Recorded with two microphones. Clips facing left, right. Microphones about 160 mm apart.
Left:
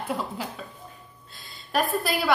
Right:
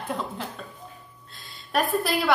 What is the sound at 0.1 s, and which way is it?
A woman's voice, 5° left (ahead or behind).